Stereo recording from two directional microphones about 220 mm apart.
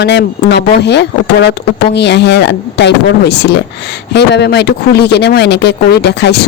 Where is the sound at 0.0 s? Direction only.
50° left (ahead or behind).